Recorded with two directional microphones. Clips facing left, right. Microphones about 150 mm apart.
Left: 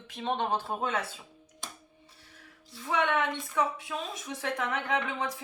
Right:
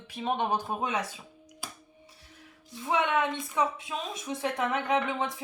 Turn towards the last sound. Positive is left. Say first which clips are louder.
# right 3 dB
turn(degrees=-20)  # may be behind; listen again after turning